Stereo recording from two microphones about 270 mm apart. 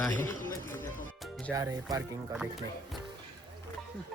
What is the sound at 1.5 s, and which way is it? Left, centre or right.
Speech, centre.